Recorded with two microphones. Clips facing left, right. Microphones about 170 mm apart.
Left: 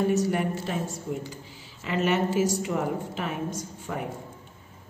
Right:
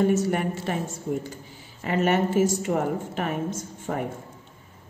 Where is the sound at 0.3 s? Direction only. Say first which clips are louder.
Right 1 dB; 60° right (ahead or behind).